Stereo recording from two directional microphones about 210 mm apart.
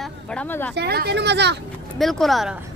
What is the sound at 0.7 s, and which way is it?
Speech, 50° right (ahead or behind).